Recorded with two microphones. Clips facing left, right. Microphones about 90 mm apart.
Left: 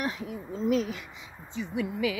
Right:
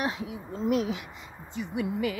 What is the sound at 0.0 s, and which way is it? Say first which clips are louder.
Speech: right 1 dB; 10° right (ahead or behind).